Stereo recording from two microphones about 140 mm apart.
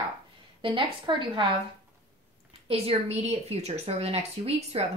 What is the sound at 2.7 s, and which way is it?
A woman's voice, 50° right (ahead or behind).